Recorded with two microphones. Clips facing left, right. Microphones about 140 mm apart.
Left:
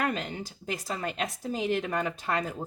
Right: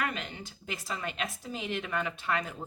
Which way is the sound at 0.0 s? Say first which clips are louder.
Left 5 dB; 35° left (ahead or behind).